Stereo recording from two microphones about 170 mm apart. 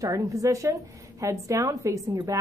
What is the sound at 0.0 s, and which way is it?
Speech, 20° right (ahead or behind).